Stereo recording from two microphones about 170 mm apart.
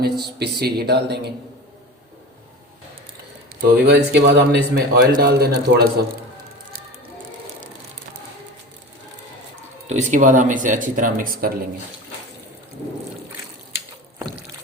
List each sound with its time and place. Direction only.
0.0 s speech: 70° right (ahead or behind)
3.6 s speech: 75° right (ahead or behind)
9.8 s speech: 45° right (ahead or behind)